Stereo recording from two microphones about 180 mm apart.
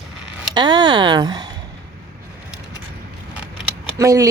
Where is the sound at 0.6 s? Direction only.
25° right (ahead or behind).